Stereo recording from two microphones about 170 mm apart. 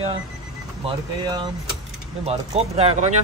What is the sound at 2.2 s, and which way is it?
Speech, 40° right (ahead or behind).